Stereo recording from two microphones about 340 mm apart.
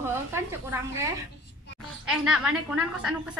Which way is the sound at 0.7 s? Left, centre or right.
Centre.